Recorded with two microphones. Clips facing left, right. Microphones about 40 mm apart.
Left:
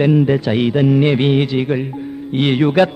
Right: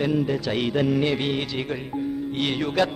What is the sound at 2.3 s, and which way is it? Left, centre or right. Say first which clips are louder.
Music: left 11 dB; left.